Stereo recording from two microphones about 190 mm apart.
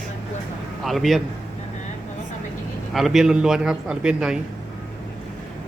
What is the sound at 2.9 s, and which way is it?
A man's voice, centre (ahead or behind).